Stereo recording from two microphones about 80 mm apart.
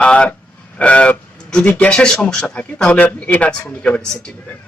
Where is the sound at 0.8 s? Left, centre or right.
Centre.